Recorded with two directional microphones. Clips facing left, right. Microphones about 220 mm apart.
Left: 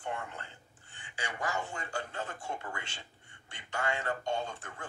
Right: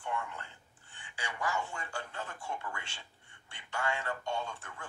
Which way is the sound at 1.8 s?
20° left (ahead or behind).